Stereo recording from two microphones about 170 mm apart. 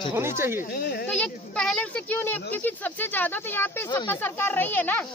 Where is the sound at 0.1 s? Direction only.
15° right (ahead or behind).